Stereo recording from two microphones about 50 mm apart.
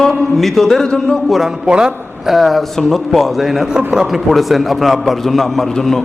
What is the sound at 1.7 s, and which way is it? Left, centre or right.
Speech, centre.